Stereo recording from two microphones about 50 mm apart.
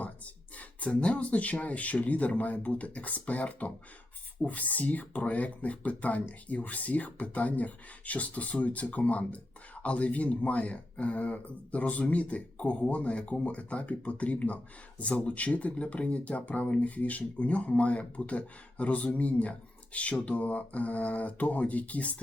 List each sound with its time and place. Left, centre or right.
0.9 s speech: left